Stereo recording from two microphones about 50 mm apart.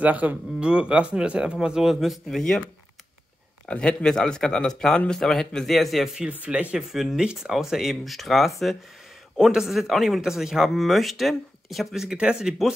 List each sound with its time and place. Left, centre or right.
0.0 s speech: right
0.6 s a man's voice: right; by 2.4 s centre
3.6 s speech: left
5.8 s speech: centre
6.5 s a man's voice: centre
7.4 s speech: centre
9.4 s speech: centre
12.0 s speech: centre